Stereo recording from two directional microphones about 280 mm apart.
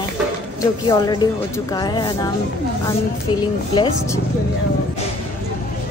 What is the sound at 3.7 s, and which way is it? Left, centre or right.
Speech, centre.